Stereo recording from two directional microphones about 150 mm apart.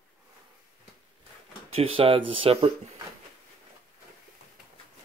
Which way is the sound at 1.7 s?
35° right (ahead or behind).